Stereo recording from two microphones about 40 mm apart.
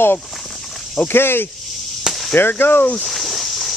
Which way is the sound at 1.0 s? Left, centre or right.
Left.